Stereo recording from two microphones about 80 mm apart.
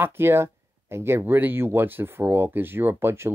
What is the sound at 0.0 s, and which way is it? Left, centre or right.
Speech, right.